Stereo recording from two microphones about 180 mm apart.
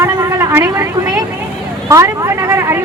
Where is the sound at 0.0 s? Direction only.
15° right (ahead or behind).